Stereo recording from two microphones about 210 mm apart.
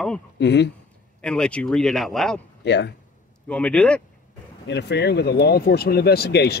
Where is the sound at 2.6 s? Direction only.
55° left (ahead or behind).